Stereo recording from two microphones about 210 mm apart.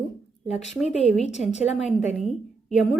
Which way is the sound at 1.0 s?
35° left (ahead or behind).